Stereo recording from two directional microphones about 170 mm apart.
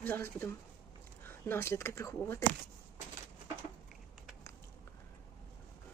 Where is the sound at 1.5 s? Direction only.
15° left (ahead or behind).